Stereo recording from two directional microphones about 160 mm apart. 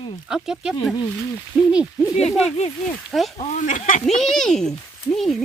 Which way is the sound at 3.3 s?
50° left (ahead or behind).